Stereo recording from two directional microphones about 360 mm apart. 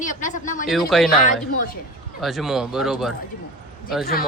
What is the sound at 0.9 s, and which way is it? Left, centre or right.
Speech, centre.